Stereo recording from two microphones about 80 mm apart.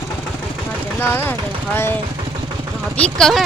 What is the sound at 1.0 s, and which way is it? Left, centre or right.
Speech, left.